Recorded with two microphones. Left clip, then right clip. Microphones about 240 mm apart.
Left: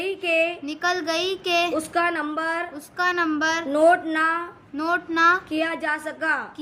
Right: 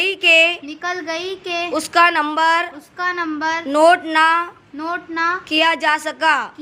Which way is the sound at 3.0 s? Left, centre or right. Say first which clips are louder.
Right 1 dB; centre.